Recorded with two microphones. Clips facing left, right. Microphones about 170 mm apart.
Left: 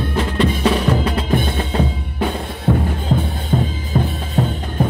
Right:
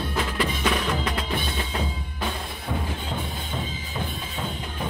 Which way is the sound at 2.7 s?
65° left (ahead or behind).